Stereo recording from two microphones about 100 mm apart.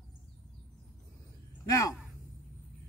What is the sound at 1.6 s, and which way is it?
Speech, 35° left (ahead or behind).